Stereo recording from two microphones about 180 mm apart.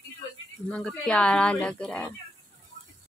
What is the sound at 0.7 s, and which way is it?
A woman's voice, 5° left (ahead or behind).